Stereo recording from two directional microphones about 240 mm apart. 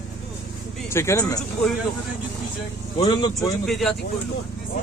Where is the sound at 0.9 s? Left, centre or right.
Centre.